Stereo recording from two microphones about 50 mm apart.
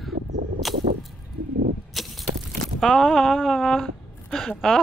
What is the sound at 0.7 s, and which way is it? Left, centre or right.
Vehicle, centre.